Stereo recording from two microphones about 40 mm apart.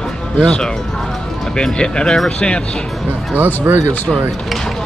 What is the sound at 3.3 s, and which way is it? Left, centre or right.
Speech, right.